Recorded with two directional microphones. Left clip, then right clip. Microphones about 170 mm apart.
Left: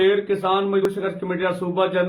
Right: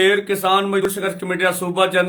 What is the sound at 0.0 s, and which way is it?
Speech, 15° right (ahead or behind).